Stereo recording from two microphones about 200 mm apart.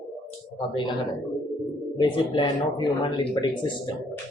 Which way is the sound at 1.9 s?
25° left (ahead or behind).